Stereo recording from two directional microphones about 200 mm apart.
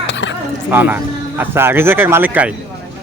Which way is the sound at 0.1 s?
65° left (ahead or behind).